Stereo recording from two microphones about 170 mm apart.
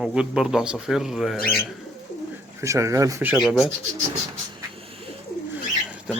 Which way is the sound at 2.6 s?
20° right (ahead or behind).